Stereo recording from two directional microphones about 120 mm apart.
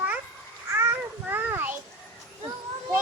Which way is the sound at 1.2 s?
15° right (ahead or behind).